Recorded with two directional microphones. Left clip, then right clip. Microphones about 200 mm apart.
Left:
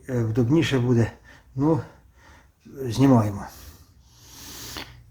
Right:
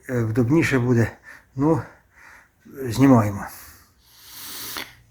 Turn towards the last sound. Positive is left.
turn(degrees=0)  # may be behind; listen again after turning